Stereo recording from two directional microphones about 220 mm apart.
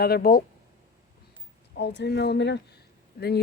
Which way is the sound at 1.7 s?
50° left (ahead or behind).